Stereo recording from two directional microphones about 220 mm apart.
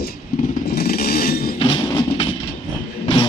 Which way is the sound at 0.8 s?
40° left (ahead or behind).